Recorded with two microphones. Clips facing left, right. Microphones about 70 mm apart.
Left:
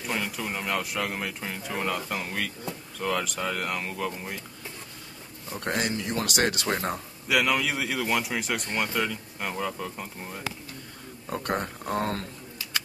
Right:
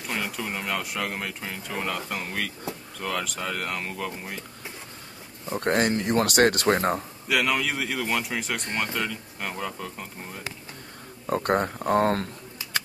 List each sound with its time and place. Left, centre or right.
0.0 s speech: centre
5.6 s speech: right
6.7 s speech: right
7.2 s speech: centre
11.2 s speech: right